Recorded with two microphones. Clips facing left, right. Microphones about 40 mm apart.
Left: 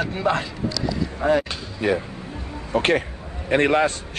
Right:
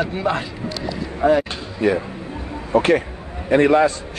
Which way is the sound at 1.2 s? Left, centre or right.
Centre.